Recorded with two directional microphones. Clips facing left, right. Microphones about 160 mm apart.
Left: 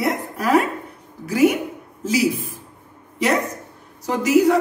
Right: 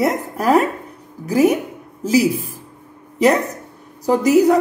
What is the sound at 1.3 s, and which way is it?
Speech, 40° right (ahead or behind).